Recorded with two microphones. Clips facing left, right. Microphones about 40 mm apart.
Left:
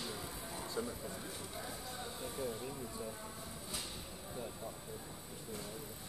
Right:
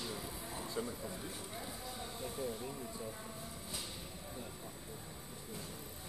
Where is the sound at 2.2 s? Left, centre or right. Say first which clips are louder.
Even; centre.